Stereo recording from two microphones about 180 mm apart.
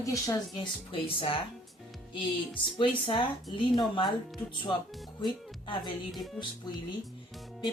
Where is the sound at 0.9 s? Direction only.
30° left (ahead or behind).